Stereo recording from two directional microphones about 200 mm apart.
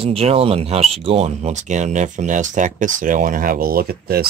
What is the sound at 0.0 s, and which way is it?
Speech, 30° right (ahead or behind).